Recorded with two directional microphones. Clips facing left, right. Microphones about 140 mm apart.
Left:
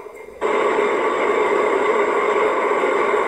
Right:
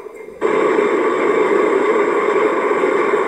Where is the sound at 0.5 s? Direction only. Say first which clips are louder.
Right 4 dB; 40° right (ahead or behind).